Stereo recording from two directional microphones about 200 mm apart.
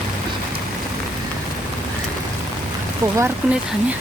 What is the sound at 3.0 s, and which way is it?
Speech, 15° right (ahead or behind).